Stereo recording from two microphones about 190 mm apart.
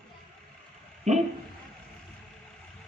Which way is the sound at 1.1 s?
40° right (ahead or behind).